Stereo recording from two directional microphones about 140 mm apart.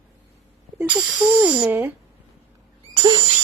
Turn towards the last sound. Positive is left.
turn(degrees=-35)  # may be behind; listen again after turning